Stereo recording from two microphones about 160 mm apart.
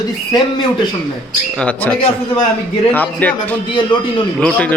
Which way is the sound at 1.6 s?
10° left (ahead or behind).